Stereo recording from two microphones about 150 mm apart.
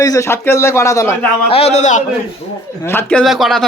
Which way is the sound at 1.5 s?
45° left (ahead or behind).